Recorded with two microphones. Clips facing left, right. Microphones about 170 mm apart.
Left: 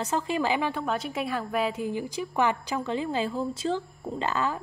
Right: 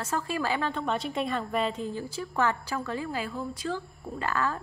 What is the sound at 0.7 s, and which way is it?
A woman's voice, 5° left (ahead or behind).